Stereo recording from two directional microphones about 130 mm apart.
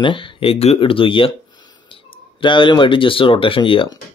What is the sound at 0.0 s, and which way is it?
Speech, 40° left (ahead or behind).